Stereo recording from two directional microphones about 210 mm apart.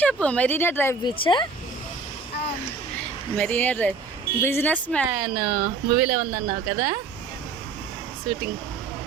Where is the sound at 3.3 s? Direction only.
5° left (ahead or behind).